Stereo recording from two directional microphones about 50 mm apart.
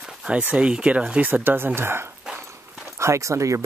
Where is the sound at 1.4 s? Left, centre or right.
Right.